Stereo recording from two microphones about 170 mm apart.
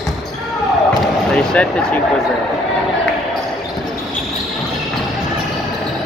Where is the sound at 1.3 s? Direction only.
5° left (ahead or behind).